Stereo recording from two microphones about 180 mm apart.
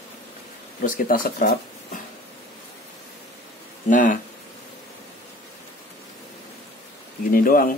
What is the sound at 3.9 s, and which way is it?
Speech, 50° left (ahead or behind).